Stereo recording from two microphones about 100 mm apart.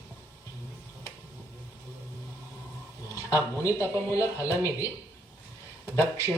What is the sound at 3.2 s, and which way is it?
Speech, 30° left (ahead or behind).